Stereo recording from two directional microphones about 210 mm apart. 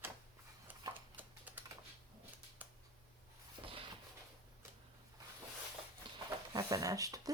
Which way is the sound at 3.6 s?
25° right (ahead or behind).